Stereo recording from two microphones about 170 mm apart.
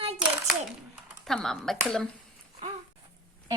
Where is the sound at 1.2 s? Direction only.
Centre (ahead or behind).